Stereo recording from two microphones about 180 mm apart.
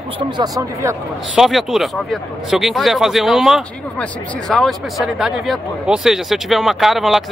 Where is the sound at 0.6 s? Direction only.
15° right (ahead or behind).